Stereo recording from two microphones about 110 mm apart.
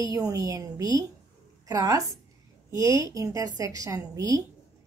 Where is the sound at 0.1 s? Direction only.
30° right (ahead or behind).